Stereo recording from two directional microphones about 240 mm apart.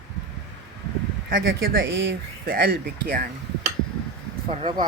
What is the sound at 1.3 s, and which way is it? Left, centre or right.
Speech, right.